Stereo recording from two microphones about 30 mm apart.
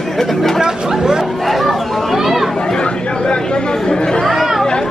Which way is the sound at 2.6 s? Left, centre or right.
Left.